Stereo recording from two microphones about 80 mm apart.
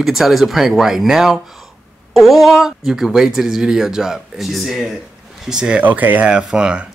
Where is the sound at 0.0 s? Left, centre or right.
Centre.